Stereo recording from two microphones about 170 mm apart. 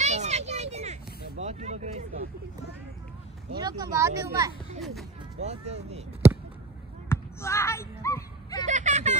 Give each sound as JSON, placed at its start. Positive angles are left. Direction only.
{"t": 0.0, "sound": "a sound", "side_deg": -40}
{"t": 3.5, "sound": "speech", "side_deg": -25}
{"t": 5.4, "sound": "speech", "side_deg": -40}
{"t": 7.1, "sound": "basketball bounce", "side_deg": 15}
{"t": 8.6, "sound": "vehicle", "side_deg": -45}